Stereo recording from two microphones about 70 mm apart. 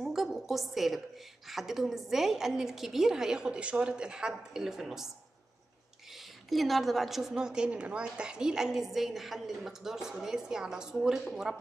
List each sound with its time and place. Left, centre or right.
0.0 s a sound: centre
1.5 s a woman's voice: centre
6.1 s a woman's voice: centre